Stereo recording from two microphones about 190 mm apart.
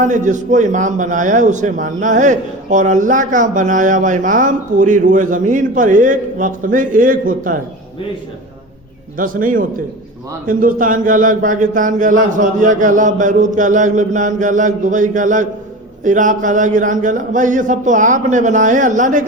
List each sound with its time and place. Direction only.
0.0 s a man's voice: 40° right (ahead or behind)
9.1 s a man's voice: 45° right (ahead or behind)